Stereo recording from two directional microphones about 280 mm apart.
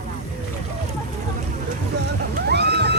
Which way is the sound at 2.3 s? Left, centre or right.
Right.